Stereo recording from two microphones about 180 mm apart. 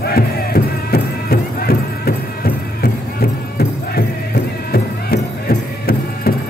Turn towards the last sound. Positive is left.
turn(degrees=55)  # may be behind; listen again after turning